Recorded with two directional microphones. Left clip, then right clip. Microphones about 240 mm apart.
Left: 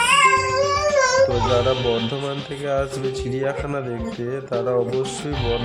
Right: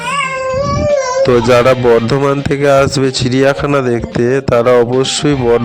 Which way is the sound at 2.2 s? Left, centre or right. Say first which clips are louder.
Right 15 dB; right.